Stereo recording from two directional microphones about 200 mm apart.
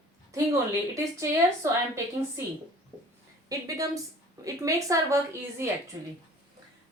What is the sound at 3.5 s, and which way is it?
A woman's voice, 15° right (ahead or behind).